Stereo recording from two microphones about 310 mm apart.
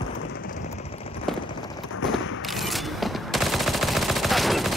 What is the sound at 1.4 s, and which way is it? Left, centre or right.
Clip-clop, centre.